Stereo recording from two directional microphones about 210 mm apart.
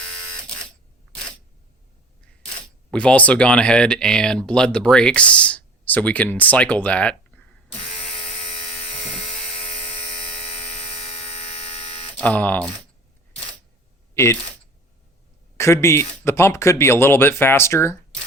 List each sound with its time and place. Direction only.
2.9 s speech: 5° left (ahead or behind)
8.2 s a sound: 25° left (ahead or behind)
8.5 s a sound: 5° left (ahead or behind)
10.2 s electric shaver: 5° left (ahead or behind)
11.0 s hum: 30° left (ahead or behind)
12.1 s speech: 5° left (ahead or behind)
15.5 s a man's voice: 15° left (ahead or behind)